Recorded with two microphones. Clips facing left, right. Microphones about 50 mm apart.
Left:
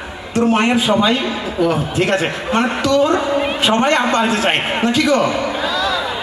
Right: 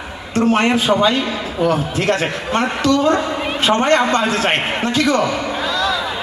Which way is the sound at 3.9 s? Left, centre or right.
Left.